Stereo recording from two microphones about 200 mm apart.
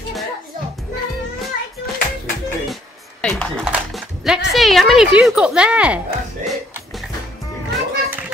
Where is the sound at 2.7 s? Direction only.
5° left (ahead or behind).